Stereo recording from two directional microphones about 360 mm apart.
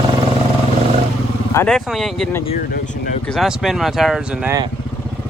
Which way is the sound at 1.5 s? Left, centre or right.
Centre.